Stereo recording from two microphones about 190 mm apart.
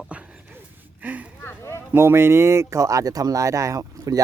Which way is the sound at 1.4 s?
15° left (ahead or behind).